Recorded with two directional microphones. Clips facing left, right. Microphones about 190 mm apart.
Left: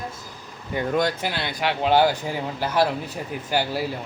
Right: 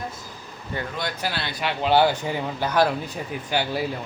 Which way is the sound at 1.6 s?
55° left (ahead or behind).